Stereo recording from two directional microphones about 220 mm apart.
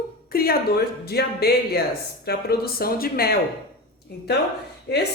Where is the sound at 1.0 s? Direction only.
45° left (ahead or behind).